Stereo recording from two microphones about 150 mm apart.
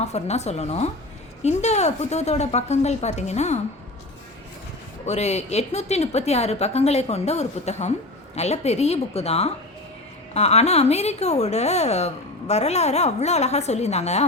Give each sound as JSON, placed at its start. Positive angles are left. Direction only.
{"t": 0.0, "sound": "a woman's voice", "side_deg": 45}
{"t": 5.0, "sound": "a woman's voice", "side_deg": 50}